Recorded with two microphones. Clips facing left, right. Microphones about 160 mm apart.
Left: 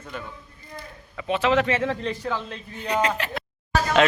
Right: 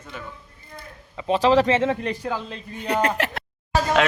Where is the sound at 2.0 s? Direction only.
15° right (ahead or behind).